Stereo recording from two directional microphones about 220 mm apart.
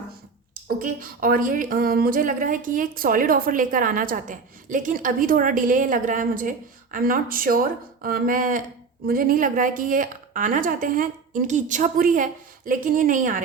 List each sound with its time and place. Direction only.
0.8 s speech: 40° right (ahead or behind)